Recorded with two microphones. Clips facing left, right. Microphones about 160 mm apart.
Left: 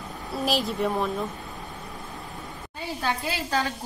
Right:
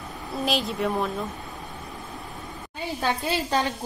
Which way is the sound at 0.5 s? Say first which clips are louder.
Even; centre (ahead or behind).